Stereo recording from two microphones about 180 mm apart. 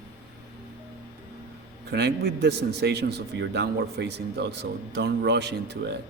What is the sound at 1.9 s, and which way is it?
A man's voice, 65° right (ahead or behind).